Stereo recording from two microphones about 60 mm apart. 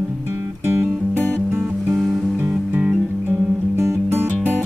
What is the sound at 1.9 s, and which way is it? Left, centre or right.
Music, centre.